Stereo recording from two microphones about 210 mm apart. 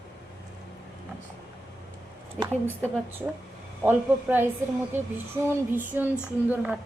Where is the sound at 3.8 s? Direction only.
10° right (ahead or behind).